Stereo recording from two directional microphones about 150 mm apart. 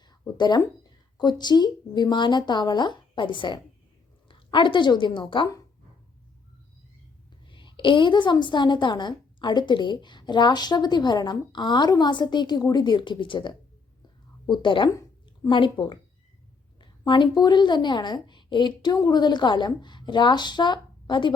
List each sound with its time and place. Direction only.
0.1 s a sound: 30° left (ahead or behind)
1.2 s a woman's voice: 30° left (ahead or behind)
7.4 s a woman's voice: 35° left (ahead or behind)
17.1 s a woman's voice: 30° left (ahead or behind)